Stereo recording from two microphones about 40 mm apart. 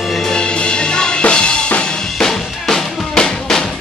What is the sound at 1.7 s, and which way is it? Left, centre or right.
Drum, left.